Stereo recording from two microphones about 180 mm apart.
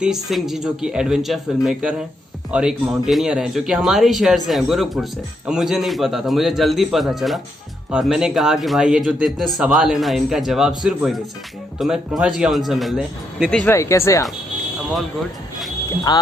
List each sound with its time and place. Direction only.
0.0 s speech: centre (ahead or behind)
13.7 s speech: 15° left (ahead or behind)
16.1 s speech: 25° left (ahead or behind)